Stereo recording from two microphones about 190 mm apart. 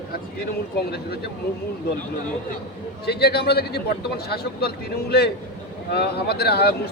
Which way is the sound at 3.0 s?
60° left (ahead or behind).